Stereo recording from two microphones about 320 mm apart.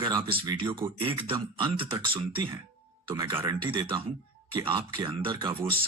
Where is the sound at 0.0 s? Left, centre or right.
Centre.